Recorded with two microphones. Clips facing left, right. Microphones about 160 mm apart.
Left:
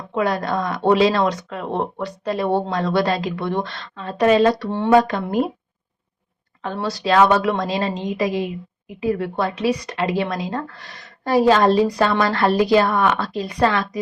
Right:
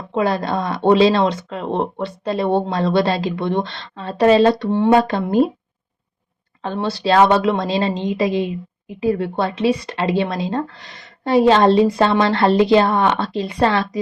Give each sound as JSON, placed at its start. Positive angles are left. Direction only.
{"t": 0.1, "sound": "speech", "side_deg": -30}
{"t": 4.9, "sound": "speech", "side_deg": -30}
{"t": 6.7, "sound": "speech", "side_deg": -30}